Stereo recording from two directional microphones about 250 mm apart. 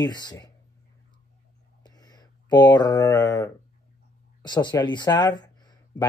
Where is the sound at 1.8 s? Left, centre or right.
Centre.